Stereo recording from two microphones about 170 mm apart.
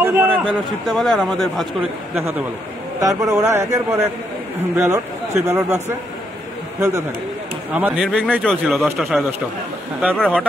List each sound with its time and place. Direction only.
0.0 s a man's voice: 10° right (ahead or behind)
3.0 s a man's voice: 20° right (ahead or behind)
7.7 s a man's voice: 5° right (ahead or behind)
10.1 s a man's voice: 5° left (ahead or behind)